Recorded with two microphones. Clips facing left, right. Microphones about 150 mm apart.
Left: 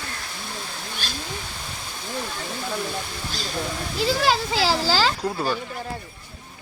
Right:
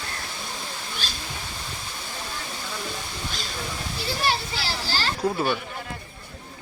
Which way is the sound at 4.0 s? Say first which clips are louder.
Left 6 dB; 90° left.